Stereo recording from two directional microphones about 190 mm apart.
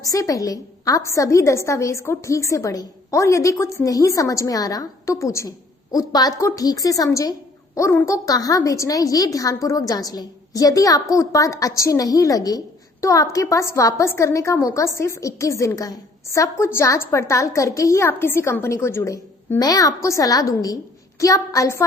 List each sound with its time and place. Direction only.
0.0 s a woman's voice: 15° left (ahead or behind)